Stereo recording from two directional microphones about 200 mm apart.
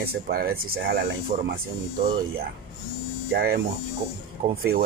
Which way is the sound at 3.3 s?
50° right (ahead or behind).